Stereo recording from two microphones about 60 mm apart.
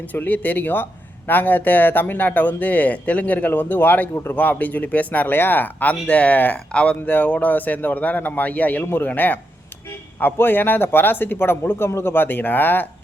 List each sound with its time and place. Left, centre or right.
0.1 s speech: left
4.1 s a man's voice: left
4.4 s speech: left
7.0 s a man's voice: left